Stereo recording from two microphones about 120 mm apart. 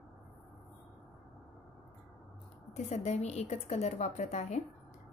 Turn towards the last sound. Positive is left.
turn(degrees=75)  # may be behind; listen again after turning